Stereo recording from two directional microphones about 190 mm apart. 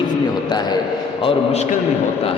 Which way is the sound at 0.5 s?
20° left (ahead or behind).